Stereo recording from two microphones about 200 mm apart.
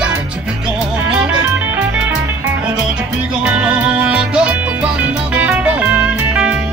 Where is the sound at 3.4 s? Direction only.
5° right (ahead or behind).